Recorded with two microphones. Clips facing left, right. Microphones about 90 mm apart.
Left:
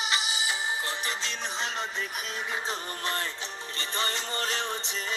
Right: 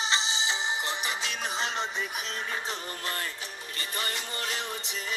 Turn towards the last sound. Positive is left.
turn(degrees=35)  # may be behind; listen again after turning